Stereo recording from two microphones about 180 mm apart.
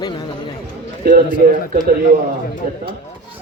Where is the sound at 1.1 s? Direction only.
55° right (ahead or behind).